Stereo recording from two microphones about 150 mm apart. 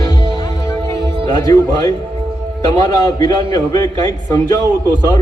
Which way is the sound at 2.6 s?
25° left (ahead or behind).